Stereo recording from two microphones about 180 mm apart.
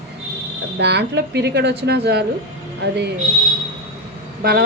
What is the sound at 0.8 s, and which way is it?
A woman's voice, 70° right (ahead or behind).